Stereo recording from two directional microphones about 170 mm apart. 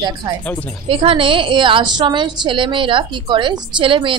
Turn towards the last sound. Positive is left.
turn(degrees=-30)  # may be behind; listen again after turning